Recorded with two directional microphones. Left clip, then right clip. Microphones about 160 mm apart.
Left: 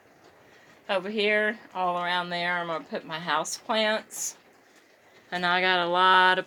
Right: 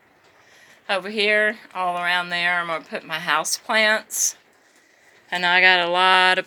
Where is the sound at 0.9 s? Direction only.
Centre (ahead or behind).